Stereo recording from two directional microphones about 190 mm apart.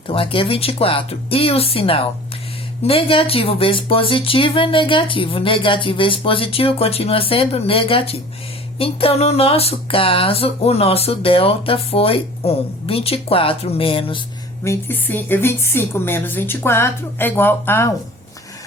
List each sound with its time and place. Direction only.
0.1 s speech: 30° left (ahead or behind)
14.6 s a woman's voice: 15° left (ahead or behind)